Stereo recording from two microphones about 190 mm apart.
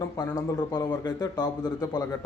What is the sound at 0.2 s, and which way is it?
A man's voice, 20° left (ahead or behind).